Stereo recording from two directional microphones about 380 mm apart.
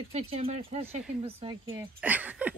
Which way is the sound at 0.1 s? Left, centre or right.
Centre.